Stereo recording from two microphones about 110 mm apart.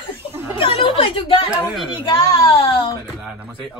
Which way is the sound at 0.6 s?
50° left (ahead or behind).